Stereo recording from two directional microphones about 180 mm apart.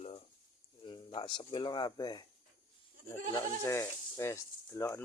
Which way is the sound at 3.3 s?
15° left (ahead or behind).